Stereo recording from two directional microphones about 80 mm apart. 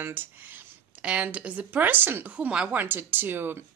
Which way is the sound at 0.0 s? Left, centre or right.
Right.